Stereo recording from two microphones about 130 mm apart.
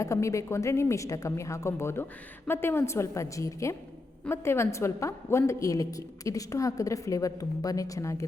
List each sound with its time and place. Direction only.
0.0 s a woman's voice: 25° left (ahead or behind)